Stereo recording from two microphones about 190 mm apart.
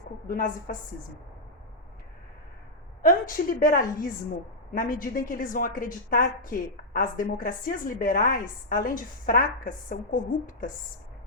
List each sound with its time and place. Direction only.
0.3 s a woman's voice: 45° left (ahead or behind)
3.0 s a woman's voice: 50° left (ahead or behind)